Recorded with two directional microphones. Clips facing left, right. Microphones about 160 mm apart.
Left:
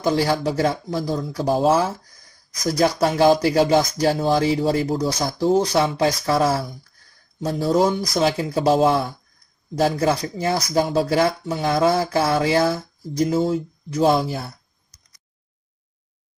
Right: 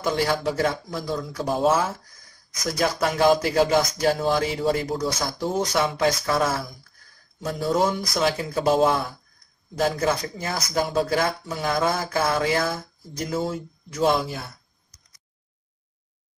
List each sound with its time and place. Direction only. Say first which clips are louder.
0.0 s speech: left 3 dB; 30° left (ahead or behind)